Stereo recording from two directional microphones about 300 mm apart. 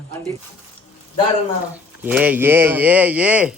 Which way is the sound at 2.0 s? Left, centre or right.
Centre.